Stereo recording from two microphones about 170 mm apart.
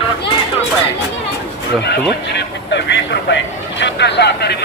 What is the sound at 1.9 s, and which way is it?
Speech, 85° left.